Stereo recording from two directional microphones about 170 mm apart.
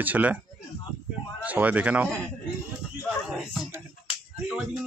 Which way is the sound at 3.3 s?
Centre (ahead or behind).